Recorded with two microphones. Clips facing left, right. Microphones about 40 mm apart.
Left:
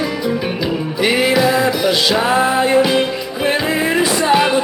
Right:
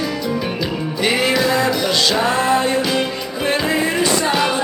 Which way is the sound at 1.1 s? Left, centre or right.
Centre.